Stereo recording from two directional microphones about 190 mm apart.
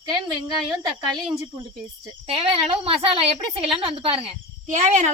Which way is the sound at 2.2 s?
25° right (ahead or behind).